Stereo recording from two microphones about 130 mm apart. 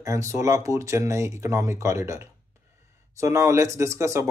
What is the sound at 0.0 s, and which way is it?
Speech, 25° right (ahead or behind).